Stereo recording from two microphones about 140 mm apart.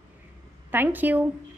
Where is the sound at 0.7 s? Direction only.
15° right (ahead or behind).